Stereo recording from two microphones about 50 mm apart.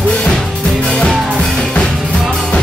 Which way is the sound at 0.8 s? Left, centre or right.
Centre.